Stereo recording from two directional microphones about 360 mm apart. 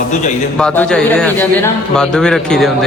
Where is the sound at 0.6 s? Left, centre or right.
Centre.